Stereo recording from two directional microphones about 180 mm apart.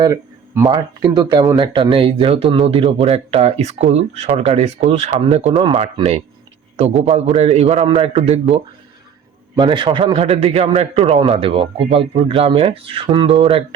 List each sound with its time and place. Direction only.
0.0 s speech: 20° right (ahead or behind); by 5.5 s 35° right (ahead or behind)
5.5 s a man's voice: 25° right (ahead or behind)
5.8 s speech: 35° right (ahead or behind)
9.6 s a man's voice: 25° right (ahead or behind)